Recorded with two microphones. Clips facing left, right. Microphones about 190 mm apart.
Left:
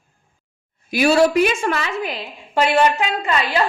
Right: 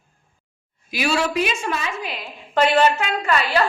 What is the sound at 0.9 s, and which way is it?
Speech, 45° left (ahead or behind).